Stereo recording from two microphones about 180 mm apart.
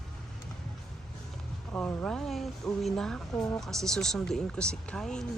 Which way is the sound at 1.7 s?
5° left (ahead or behind).